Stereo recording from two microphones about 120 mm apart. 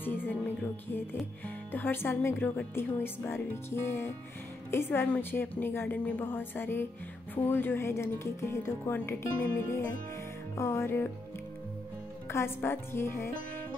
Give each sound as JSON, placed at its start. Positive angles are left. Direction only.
{"t": 0.0, "sound": "music", "side_deg": 15}
{"t": 1.7, "sound": "speech", "side_deg": 15}
{"t": 12.3, "sound": "speech", "side_deg": 20}